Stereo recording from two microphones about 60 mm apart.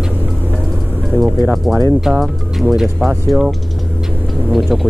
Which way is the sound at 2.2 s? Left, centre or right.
Centre.